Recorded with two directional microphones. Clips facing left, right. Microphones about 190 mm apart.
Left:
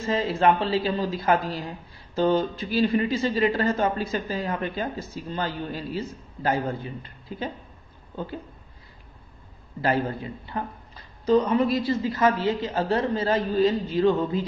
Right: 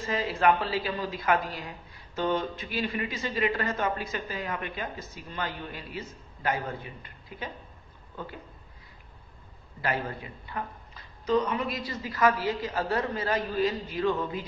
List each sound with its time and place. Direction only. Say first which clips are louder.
0.0 s a man's voice: left 4 dB; 25° left (ahead or behind)
9.8 s a man's voice: left 7 dB; 30° left (ahead or behind)